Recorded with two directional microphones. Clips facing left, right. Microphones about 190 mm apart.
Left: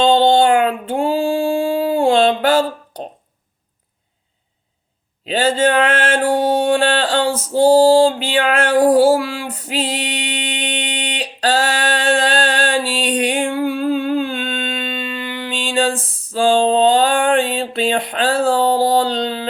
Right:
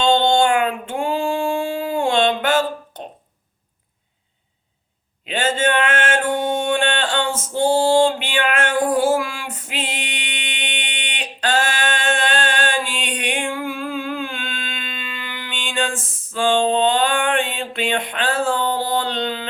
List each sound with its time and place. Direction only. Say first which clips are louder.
0.0 s female singing: left 4 dB; 35° left (ahead or behind)
5.2 s mantra: left 5 dB; 35° left (ahead or behind)